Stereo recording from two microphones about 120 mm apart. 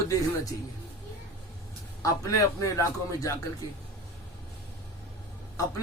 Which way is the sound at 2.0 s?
25° left (ahead or behind).